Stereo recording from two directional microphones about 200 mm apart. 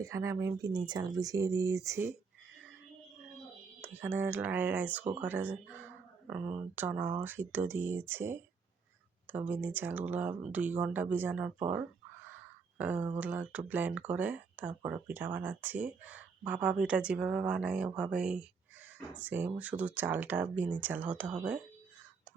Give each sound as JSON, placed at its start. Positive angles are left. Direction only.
{"t": 0.0, "sound": "speech", "side_deg": -15}
{"t": 3.8, "sound": "speech", "side_deg": -10}
{"t": 12.7, "sound": "a sound", "side_deg": -10}
{"t": 13.1, "sound": "speech", "side_deg": -5}